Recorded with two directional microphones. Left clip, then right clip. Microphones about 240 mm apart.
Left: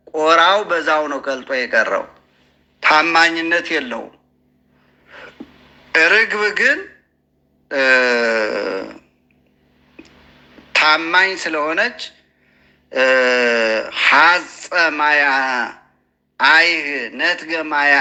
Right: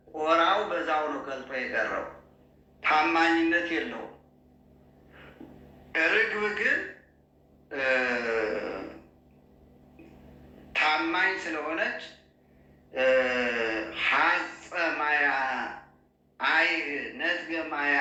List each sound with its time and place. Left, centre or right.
0.1 s a man's voice: left
5.9 s speech: left
10.7 s speech: left